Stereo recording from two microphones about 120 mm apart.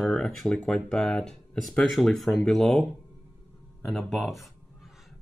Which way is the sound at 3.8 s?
Centre (ahead or behind).